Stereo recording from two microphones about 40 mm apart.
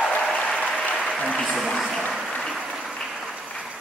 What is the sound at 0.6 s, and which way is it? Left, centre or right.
Applause, left.